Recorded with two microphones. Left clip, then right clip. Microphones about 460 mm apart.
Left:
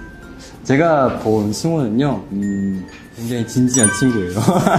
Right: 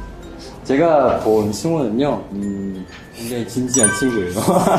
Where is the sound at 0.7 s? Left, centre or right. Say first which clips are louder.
Right 1 dB; left.